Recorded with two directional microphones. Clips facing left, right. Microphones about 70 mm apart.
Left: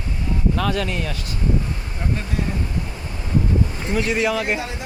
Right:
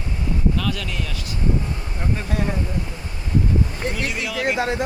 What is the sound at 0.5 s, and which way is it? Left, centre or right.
Speech, left.